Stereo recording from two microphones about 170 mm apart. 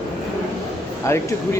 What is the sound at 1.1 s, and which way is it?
Speech, 15° left (ahead or behind).